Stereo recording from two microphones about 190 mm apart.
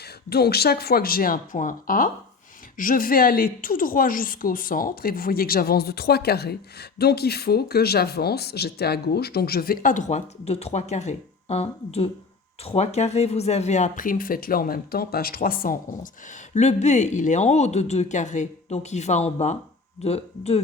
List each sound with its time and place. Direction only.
0.3 s a woman's voice: 55° left (ahead or behind)
16.6 s speech: 35° left (ahead or behind)